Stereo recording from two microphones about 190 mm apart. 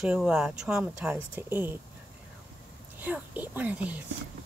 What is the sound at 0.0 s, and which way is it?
Speech, 5° right (ahead or behind).